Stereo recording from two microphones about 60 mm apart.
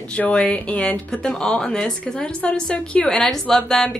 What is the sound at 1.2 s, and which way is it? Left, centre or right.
A woman's voice, centre.